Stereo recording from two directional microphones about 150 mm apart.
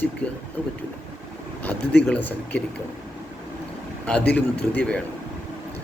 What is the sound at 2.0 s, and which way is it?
Speech, 10° left (ahead or behind).